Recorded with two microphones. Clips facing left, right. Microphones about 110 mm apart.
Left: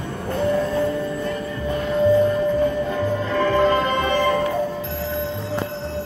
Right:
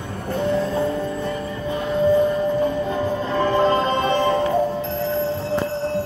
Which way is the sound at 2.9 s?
25° right (ahead or behind).